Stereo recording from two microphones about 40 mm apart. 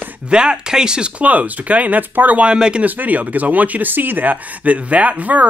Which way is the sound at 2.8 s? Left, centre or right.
Right.